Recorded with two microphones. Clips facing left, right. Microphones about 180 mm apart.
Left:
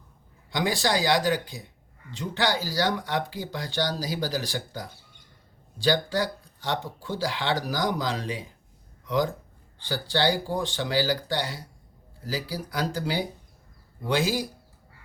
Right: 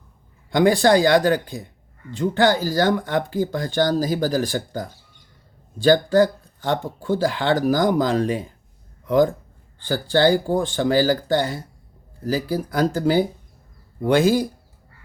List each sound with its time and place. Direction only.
0.5 s speech: 55° right (ahead or behind)